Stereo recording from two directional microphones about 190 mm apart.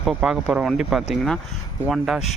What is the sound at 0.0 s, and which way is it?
Speech, 5° right (ahead or behind).